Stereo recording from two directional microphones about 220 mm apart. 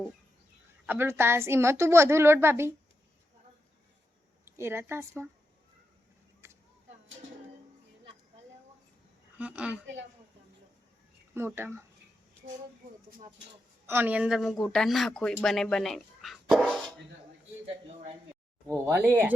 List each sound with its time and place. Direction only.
0.9 s a woman's voice: 10° right (ahead or behind)
4.4 s speech: 10° right (ahead or behind)
6.4 s a sound: 10° right (ahead or behind)
9.4 s speech: 5° right (ahead or behind)
9.8 s a woman's voice: 55° right (ahead or behind)
11.3 s a woman's voice: 10° right (ahead or behind)
13.8 s speech: 10° right (ahead or behind)
18.7 s a woman's voice: 10° right (ahead or behind)